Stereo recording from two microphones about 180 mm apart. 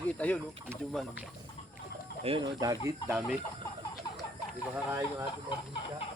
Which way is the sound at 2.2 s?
25° right (ahead or behind).